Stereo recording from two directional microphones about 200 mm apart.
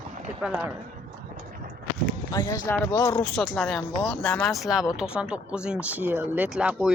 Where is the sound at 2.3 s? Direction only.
15° left (ahead or behind).